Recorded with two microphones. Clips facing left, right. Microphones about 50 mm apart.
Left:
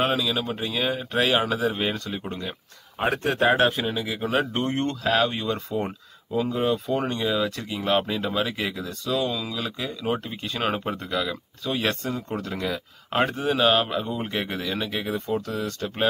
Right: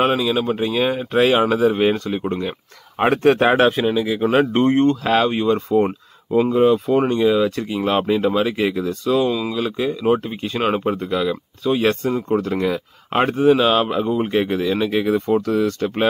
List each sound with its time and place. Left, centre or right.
0.0 s speech: right
0.9 s speech: right
3.0 s speech: right
3.4 s speech: right
3.7 s speech: centre
4.3 s speech: right
4.7 s speech: right
10.9 s speech: centre
15.0 s speech: right